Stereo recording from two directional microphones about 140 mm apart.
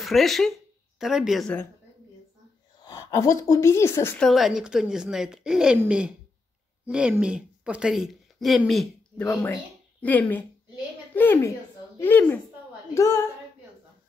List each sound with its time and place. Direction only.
0.0 s a woman's voice: centre (ahead or behind)
2.8 s speech: 25° left (ahead or behind)
4.2 s a woman's voice: centre (ahead or behind)
9.2 s speech: 15° left (ahead or behind)